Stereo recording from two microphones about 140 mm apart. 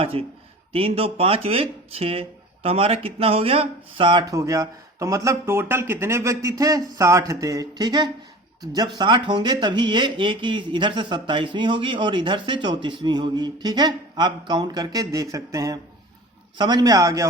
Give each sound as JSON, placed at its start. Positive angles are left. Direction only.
{"t": 0.0, "sound": "speech", "side_deg": -45}